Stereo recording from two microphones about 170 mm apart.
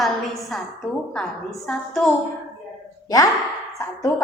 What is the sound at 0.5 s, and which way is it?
A woman's voice, centre (ahead or behind).